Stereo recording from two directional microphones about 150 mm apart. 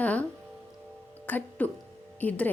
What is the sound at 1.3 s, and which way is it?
Speech, 10° left (ahead or behind).